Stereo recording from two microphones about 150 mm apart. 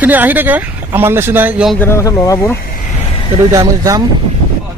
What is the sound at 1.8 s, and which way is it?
Speech, 15° left (ahead or behind).